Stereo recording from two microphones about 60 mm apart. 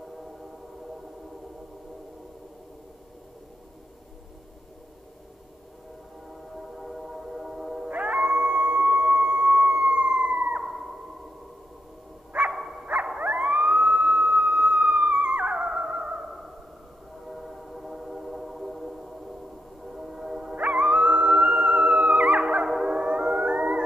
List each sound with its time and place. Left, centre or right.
6.5 s music: centre
7.9 s music: right
12.3 s dog: right
13.2 s theremin: right
17.3 s train: centre
20.5 s music: right